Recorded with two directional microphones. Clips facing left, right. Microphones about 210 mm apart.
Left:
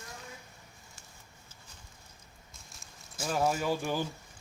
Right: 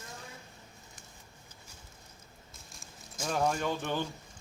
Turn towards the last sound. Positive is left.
turn(degrees=5)  # may be behind; listen again after turning